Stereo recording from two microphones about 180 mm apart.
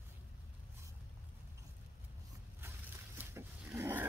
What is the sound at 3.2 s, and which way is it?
Roaring cats, 10° right (ahead or behind).